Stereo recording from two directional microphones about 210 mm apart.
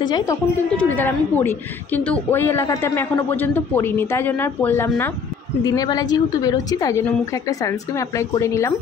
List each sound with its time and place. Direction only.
0.0 s speech: 20° left (ahead or behind)
0.7 s a woman's voice: 10° left (ahead or behind)